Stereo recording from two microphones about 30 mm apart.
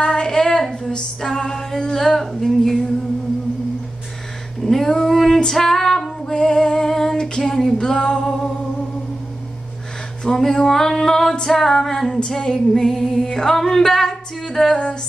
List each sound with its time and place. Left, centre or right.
0.0 s female singing: left; by 2.9 s centre
4.6 s a sound: centre
5.0 s music: centre
5.4 s female singing: centre
6.3 s female singing: left
7.2 s a sound: centre
7.7 s music: left
10.2 s female singing: centre
12.4 s music: left
13.1 s female singing: centre
14.7 s music: left